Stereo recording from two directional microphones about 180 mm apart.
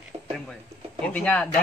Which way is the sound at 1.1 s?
5° left (ahead or behind).